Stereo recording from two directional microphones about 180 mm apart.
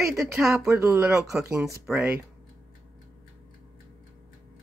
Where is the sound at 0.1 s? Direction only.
Centre (ahead or behind).